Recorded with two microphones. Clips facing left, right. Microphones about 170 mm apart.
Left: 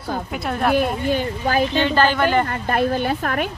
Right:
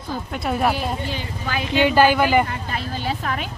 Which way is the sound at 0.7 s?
50° left (ahead or behind).